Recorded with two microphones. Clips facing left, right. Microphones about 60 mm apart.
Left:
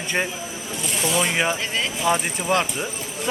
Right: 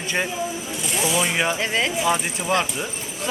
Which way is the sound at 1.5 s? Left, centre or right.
Centre.